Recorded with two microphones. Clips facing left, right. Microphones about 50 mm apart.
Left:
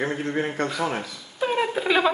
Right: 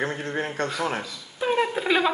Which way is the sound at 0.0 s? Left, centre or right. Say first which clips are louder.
Left 2 dB; left.